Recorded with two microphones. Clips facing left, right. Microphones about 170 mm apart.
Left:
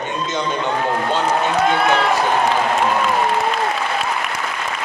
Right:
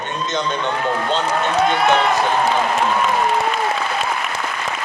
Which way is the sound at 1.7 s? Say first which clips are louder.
Right 1 dB; centre (ahead or behind).